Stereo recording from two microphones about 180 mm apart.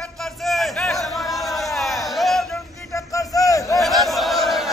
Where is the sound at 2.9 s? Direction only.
20° left (ahead or behind).